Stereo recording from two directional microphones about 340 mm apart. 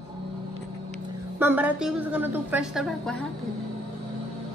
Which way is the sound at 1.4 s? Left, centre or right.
Centre.